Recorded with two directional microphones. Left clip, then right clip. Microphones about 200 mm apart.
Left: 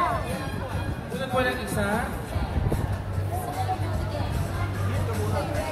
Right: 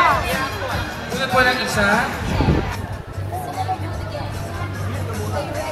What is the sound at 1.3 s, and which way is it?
Speech, 25° right (ahead or behind).